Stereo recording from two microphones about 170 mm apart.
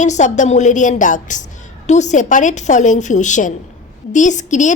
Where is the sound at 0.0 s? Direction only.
45° left (ahead or behind).